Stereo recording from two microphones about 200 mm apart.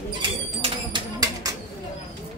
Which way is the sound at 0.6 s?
20° right (ahead or behind).